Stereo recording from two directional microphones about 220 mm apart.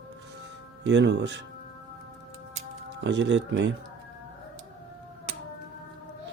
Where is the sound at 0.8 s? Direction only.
55° right (ahead or behind).